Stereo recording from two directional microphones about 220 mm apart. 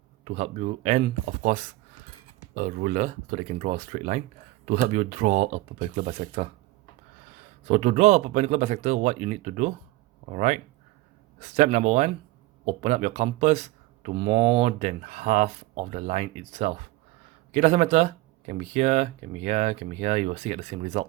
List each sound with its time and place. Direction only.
0.3 s speech: 30° right (ahead or behind)
7.7 s speech: 30° right (ahead or behind)